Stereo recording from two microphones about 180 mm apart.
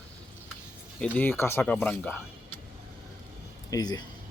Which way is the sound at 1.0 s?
10° left (ahead or behind).